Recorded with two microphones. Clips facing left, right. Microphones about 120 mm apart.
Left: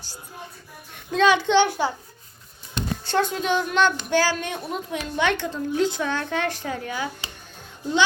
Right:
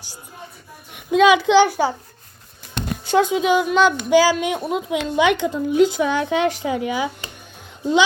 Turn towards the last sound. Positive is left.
turn(degrees=-15)  # may be behind; listen again after turning